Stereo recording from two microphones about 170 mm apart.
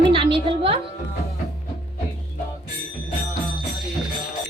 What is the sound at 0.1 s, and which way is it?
Music, 30° right (ahead or behind).